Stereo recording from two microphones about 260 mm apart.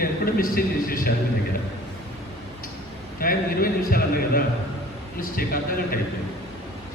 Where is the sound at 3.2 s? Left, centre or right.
Left.